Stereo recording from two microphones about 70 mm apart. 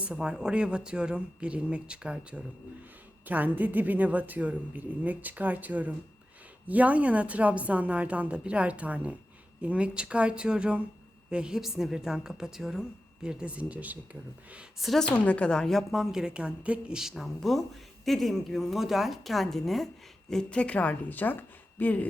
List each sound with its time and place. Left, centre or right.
0.0 s speech: centre
3.2 s a woman's voice: right
14.8 s a woman's voice: centre
15.1 s a woman's voice: centre
15.9 s speech: centre
17.0 s a woman's voice: centre
20.3 s a woman's voice: centre